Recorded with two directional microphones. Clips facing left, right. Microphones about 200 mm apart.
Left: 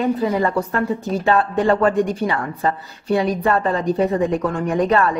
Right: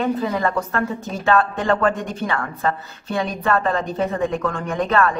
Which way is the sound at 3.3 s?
30° left (ahead or behind).